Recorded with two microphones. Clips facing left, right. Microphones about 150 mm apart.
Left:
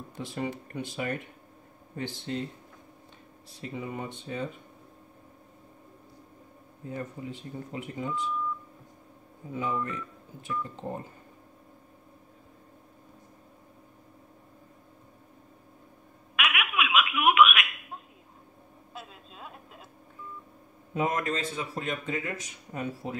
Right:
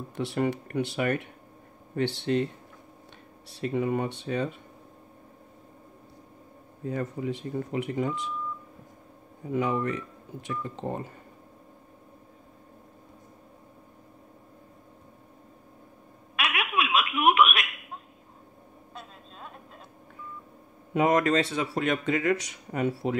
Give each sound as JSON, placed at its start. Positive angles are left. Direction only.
{"t": 0.1, "sound": "speech", "side_deg": -70}
{"t": 3.4, "sound": "speech", "side_deg": -75}
{"t": 6.9, "sound": "speech", "side_deg": -80}
{"t": 9.5, "sound": "speech", "side_deg": -75}
{"t": 16.3, "sound": "baby laughter", "side_deg": -35}
{"t": 18.9, "sound": "a sound", "side_deg": 5}
{"t": 20.9, "sound": "speech", "side_deg": -80}